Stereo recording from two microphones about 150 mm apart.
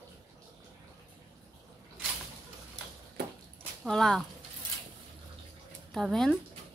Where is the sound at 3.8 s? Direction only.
Centre (ahead or behind).